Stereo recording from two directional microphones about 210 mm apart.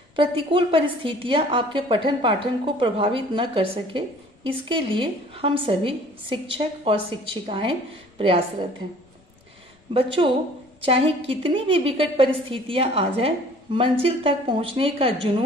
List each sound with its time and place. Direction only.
0.1 s a woman's voice: 25° right (ahead or behind)
9.9 s a woman's voice: 25° right (ahead or behind)